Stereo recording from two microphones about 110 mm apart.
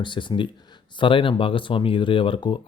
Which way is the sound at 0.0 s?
45° left (ahead or behind).